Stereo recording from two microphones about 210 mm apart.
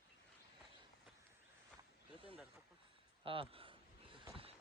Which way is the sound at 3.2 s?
25° right (ahead or behind).